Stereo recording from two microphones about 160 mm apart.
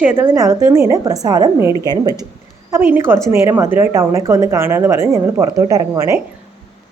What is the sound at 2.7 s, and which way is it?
A woman's voice, 10° right (ahead or behind).